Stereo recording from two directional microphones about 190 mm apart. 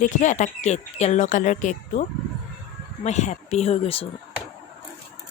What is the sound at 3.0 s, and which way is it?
Speech, 35° left (ahead or behind).